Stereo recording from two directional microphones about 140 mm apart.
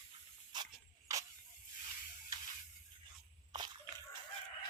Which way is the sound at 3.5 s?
30° right (ahead or behind).